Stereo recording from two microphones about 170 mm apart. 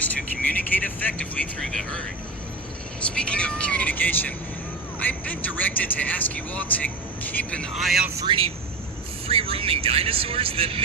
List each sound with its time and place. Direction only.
0.8 s speech: 10° left (ahead or behind)
3.0 s a man's voice: 5° left (ahead or behind)
8.2 s speech: 30° right (ahead or behind)